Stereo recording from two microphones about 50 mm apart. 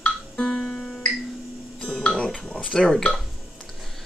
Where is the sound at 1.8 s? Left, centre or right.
Centre.